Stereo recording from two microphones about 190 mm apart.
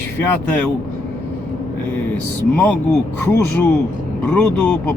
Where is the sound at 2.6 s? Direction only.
5° left (ahead or behind).